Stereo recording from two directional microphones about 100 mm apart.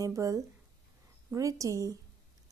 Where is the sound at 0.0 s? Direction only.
30° right (ahead or behind).